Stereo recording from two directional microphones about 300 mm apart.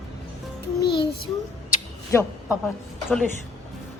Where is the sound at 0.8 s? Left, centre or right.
Left.